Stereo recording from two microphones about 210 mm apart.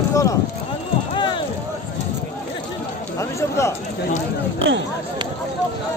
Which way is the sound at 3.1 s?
15° left (ahead or behind).